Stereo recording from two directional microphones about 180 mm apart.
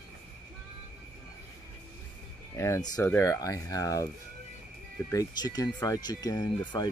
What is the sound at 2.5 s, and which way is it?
Speech, 15° left (ahead or behind).